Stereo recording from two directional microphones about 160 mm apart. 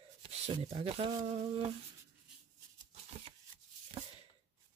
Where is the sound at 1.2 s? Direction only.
45° right (ahead or behind).